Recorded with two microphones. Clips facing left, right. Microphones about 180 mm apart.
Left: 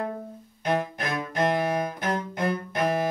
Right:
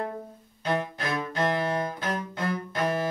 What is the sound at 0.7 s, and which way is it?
Cello, 20° left (ahead or behind).